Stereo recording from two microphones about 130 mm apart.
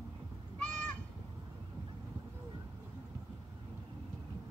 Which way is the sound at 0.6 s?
10° left (ahead or behind).